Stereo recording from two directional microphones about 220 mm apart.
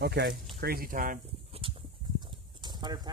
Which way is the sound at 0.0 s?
50° right (ahead or behind).